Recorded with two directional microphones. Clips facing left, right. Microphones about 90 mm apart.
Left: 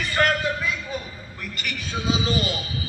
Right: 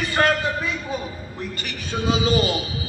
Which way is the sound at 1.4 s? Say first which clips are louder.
Right 1 dB; 30° right (ahead or behind).